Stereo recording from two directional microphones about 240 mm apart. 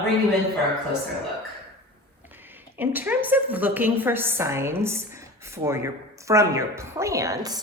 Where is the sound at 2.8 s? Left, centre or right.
Centre.